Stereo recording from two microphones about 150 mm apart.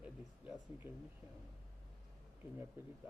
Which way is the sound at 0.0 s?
10° right (ahead or behind).